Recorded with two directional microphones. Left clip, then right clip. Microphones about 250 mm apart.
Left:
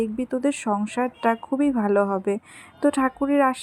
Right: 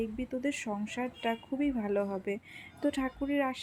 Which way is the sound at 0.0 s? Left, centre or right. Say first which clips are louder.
Left 10 dB; left.